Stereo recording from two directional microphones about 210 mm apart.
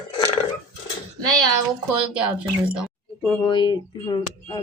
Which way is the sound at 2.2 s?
5° right (ahead or behind).